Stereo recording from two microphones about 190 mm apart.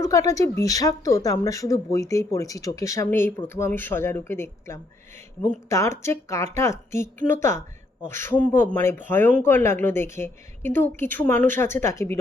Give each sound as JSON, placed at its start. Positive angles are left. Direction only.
{"t": 0.0, "sound": "speech", "side_deg": 15}